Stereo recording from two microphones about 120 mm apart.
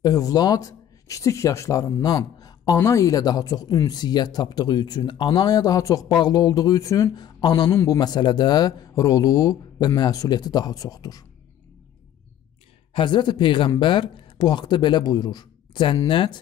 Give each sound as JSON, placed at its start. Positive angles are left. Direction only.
{"t": 0.0, "sound": "speech", "side_deg": 30}
{"t": 12.9, "sound": "speech", "side_deg": 40}